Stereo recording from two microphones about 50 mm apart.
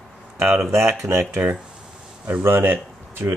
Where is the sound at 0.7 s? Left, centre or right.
Right.